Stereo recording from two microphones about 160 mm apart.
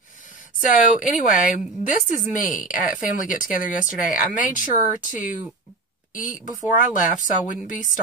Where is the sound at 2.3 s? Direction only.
55° left (ahead or behind).